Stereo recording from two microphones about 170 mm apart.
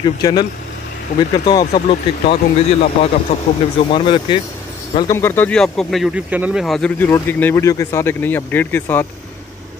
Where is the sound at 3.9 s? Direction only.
30° left (ahead or behind).